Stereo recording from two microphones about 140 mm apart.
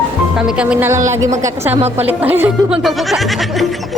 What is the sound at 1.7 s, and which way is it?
Speech, 50° right (ahead or behind).